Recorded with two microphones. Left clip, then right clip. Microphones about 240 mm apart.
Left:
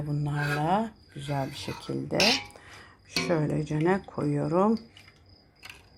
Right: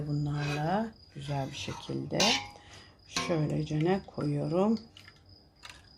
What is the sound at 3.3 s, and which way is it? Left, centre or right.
Speech, centre.